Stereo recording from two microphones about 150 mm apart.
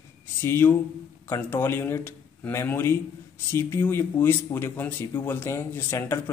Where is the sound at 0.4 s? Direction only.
15° left (ahead or behind).